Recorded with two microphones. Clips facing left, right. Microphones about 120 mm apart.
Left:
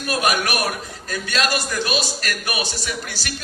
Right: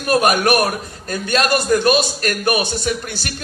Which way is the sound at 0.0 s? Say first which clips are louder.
Right 6 dB; 45° right (ahead or behind).